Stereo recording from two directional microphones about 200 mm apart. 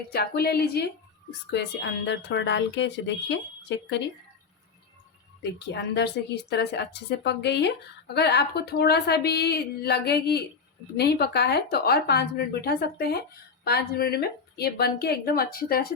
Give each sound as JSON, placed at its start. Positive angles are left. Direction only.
{"t": 0.1, "sound": "a woman's voice", "side_deg": 50}
{"t": 5.4, "sound": "a woman's voice", "side_deg": 60}